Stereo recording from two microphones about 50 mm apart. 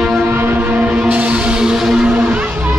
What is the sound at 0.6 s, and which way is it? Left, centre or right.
Music, right.